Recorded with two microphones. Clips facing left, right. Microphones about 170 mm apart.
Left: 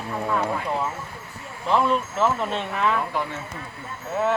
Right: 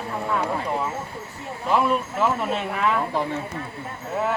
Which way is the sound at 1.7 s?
10° right (ahead or behind).